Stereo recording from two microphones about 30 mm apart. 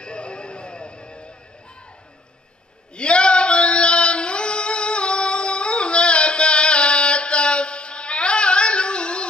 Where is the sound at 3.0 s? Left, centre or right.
Left.